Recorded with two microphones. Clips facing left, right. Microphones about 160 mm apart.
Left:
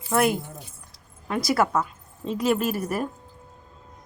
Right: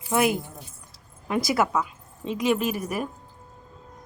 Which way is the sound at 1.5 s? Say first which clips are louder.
Left 3 dB; centre (ahead or behind).